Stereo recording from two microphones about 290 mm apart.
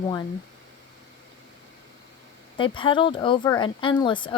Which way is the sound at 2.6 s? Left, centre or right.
Centre.